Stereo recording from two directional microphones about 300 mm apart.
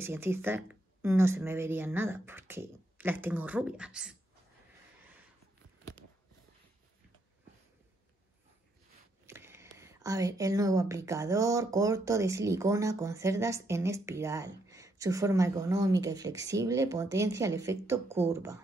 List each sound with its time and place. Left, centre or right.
0.0 s speech: centre
9.2 s speech: centre